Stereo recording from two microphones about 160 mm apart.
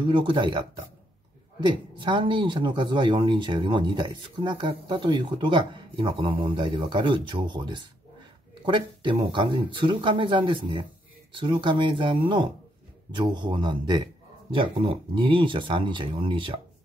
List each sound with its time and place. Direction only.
0.0 s speech: 30° right (ahead or behind)